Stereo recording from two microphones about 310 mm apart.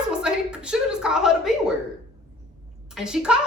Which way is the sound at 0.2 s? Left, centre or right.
Centre.